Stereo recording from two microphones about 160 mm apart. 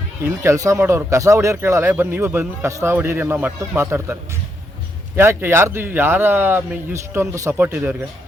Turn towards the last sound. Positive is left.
turn(degrees=-15)  # may be behind; listen again after turning